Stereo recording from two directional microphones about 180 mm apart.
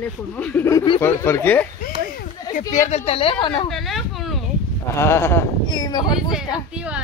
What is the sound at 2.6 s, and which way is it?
A woman's voice, 40° left (ahead or behind).